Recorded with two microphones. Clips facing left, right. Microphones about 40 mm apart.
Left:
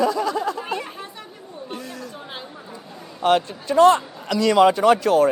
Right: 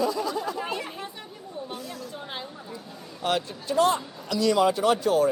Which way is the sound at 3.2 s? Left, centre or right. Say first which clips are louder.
Left 8 dB; left.